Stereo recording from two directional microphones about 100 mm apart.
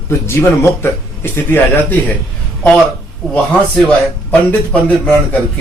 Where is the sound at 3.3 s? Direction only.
10° left (ahead or behind).